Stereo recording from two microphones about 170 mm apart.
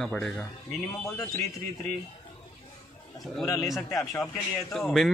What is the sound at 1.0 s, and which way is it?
Speech, 20° left (ahead or behind).